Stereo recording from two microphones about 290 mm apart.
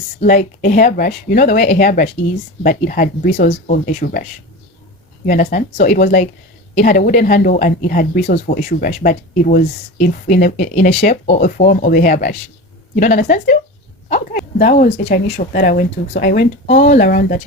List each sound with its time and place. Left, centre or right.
0.2 s speech: left